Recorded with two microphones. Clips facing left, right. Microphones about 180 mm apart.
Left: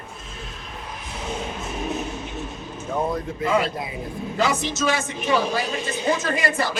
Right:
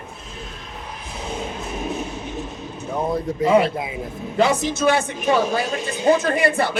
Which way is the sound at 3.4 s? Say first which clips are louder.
Right 6 dB; 30° right (ahead or behind).